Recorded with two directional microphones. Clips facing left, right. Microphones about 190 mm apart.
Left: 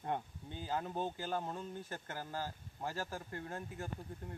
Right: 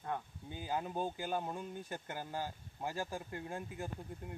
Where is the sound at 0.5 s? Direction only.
15° right (ahead or behind).